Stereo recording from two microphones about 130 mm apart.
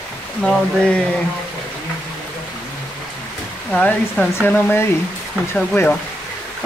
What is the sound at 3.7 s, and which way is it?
Speech, 10° left (ahead or behind).